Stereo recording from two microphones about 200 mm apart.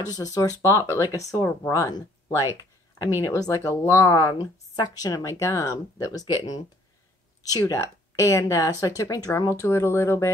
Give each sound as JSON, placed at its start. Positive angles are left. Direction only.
{"t": 0.0, "sound": "speech", "side_deg": 20}
{"t": 3.3, "sound": "speech", "side_deg": 15}